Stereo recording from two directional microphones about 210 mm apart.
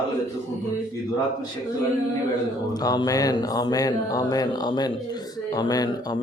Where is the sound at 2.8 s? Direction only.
15° left (ahead or behind).